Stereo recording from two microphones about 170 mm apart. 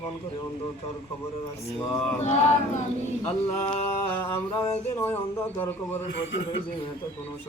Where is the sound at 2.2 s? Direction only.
40° left (ahead or behind).